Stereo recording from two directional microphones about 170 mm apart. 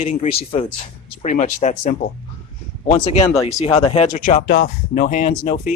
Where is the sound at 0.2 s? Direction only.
35° left (ahead or behind).